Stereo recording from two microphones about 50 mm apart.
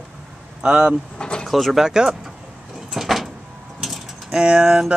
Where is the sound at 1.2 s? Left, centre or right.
Centre.